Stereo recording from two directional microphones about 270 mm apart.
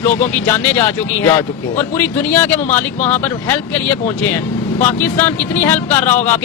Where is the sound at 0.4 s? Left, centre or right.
Centre.